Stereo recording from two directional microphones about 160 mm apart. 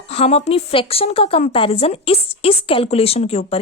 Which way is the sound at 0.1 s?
40° left (ahead or behind).